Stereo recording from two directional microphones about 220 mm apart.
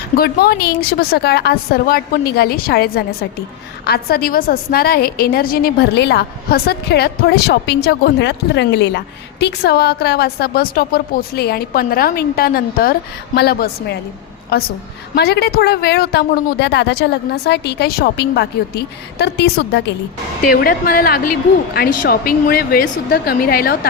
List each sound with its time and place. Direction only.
0.2 s a woman's voice: 45° left (ahead or behind)
20.4 s a woman's voice: 40° left (ahead or behind)